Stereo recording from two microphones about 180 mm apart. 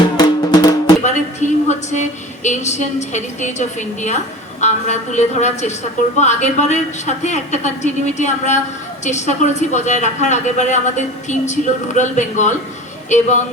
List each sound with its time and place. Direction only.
0.0 s music: 25° left (ahead or behind)
1.0 s a sound: 40° left (ahead or behind)
4.6 s a woman's voice: 40° left (ahead or behind)